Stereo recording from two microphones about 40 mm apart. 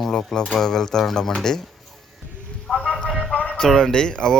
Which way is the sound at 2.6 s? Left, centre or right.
Left.